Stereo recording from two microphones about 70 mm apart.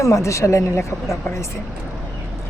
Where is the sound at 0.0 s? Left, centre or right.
Left.